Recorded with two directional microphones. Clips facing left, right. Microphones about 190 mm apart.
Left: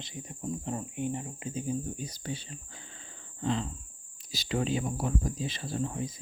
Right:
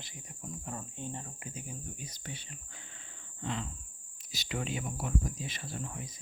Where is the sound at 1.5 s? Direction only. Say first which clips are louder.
Left 14 dB; 30° left (ahead or behind).